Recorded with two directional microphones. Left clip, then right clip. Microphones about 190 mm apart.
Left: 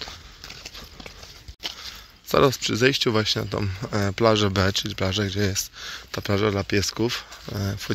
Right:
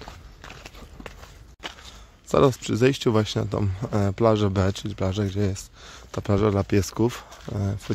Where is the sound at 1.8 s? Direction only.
15° right (ahead or behind).